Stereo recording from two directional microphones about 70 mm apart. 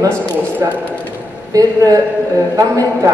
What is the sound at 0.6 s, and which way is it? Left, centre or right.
A woman's voice, right.